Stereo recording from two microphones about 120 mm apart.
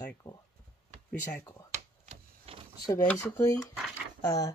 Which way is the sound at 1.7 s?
60° right (ahead or behind).